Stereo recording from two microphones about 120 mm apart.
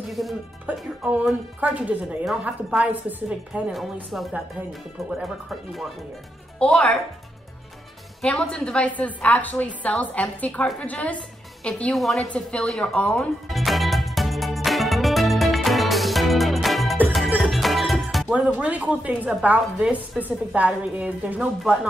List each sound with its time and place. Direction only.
0.1 s speech: centre (ahead or behind)
0.7 s a woman's voice: 15° right (ahead or behind)
6.6 s a woman's voice: 10° left (ahead or behind)
8.2 s a woman's voice: 10° left (ahead or behind)
13.5 s music: centre (ahead or behind)
18.6 s a woman's voice: 10° right (ahead or behind)